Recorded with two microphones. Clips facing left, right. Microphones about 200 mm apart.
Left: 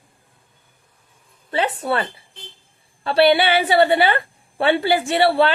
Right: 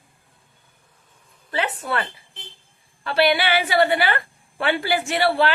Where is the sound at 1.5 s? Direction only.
30° left (ahead or behind).